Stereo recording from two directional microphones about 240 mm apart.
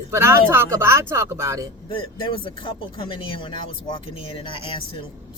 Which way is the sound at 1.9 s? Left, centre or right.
Left.